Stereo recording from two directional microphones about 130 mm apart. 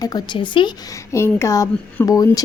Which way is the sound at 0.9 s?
20° left (ahead or behind).